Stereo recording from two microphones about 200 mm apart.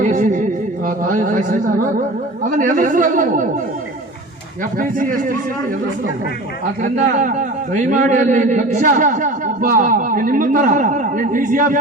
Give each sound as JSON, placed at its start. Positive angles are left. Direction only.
{"t": 0.0, "sound": "a sound", "side_deg": -40}
{"t": 0.9, "sound": "a man's voice", "side_deg": -40}
{"t": 4.8, "sound": "a man's voice", "side_deg": -40}
{"t": 6.8, "sound": "a man's voice", "side_deg": -40}